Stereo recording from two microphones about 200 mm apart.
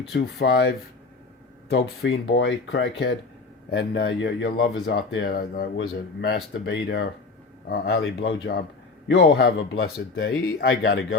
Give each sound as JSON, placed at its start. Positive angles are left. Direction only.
{"t": 0.1, "sound": "speech", "side_deg": 55}
{"t": 1.7, "sound": "speech", "side_deg": 55}
{"t": 6.2, "sound": "a man's voice", "side_deg": 60}
{"t": 10.6, "sound": "speech", "side_deg": 70}